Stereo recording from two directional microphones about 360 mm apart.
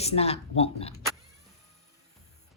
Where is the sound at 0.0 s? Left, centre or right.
Centre.